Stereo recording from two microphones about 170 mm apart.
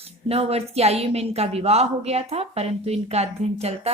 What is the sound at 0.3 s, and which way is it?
A woman's voice, 35° right (ahead or behind).